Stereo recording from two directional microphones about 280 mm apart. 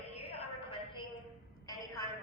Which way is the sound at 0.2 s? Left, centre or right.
Centre.